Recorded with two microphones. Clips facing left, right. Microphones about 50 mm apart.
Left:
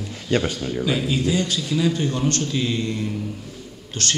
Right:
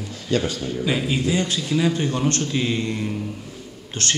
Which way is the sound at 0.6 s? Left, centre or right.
Centre.